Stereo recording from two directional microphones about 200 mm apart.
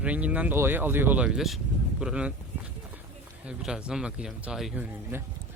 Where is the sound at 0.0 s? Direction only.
5° right (ahead or behind).